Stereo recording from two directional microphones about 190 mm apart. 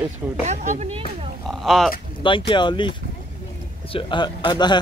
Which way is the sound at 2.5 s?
25° left (ahead or behind).